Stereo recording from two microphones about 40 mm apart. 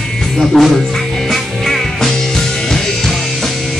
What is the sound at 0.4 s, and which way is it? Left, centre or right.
Speech, centre.